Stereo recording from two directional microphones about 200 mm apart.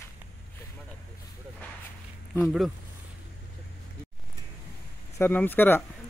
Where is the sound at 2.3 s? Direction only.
Centre (ahead or behind).